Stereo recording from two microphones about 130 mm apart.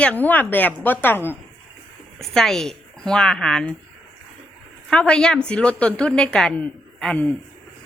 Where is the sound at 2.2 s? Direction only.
Centre (ahead or behind).